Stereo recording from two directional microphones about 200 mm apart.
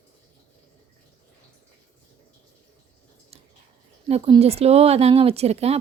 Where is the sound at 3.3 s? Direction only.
30° right (ahead or behind).